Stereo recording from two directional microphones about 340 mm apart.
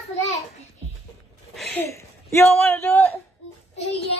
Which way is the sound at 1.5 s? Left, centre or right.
Centre.